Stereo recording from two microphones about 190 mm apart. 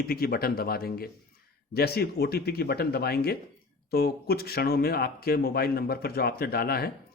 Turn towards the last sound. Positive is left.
turn(degrees=55)  # may be behind; listen again after turning